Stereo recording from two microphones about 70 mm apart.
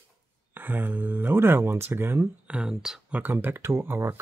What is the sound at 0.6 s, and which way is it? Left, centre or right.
Speech, right.